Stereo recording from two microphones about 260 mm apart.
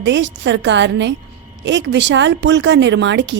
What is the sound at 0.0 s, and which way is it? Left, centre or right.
A woman's voice, right.